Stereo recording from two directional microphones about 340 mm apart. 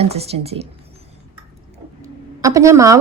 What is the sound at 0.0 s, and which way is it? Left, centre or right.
Speech, centre.